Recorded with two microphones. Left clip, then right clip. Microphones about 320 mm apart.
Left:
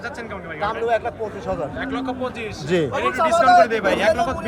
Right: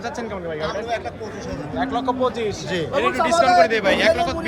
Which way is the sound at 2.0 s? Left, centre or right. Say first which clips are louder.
Right 5 dB; centre.